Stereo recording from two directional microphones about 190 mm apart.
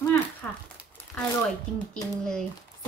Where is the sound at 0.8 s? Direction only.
10° right (ahead or behind).